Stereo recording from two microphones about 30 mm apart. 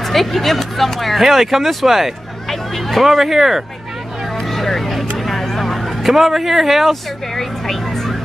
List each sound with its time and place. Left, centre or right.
0.0 s speech: centre
4.6 s vehicle: centre
5.2 s a sound: centre
6.1 s speech: centre
7.3 s speech: centre